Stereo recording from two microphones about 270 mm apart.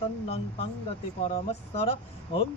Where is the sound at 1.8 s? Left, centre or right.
Left.